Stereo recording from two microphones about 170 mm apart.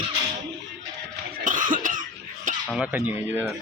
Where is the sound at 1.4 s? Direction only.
50° right (ahead or behind).